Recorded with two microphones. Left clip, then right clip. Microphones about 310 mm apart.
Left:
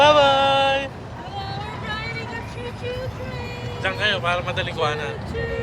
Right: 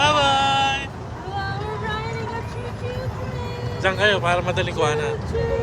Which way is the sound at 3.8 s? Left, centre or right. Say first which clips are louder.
Right 3 dB; centre.